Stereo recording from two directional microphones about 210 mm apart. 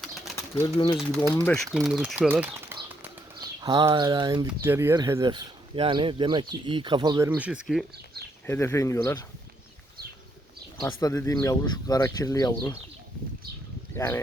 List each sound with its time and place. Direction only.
0.0 s bird: centre (ahead or behind)
0.6 s speech: 20° left (ahead or behind)
1.4 s speech: 5° left (ahead or behind)
3.4 s speech: 20° right (ahead or behind); by 7.9 s 5° right (ahead or behind)
8.4 s speech: 10° left (ahead or behind)
11.0 s speech: 15° left (ahead or behind)
13.9 s speech: 10° left (ahead or behind)